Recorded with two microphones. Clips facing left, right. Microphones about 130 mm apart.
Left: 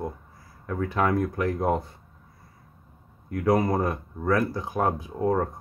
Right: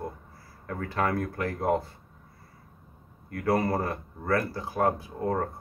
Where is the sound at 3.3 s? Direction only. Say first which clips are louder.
Left 3 dB; 15° left (ahead or behind).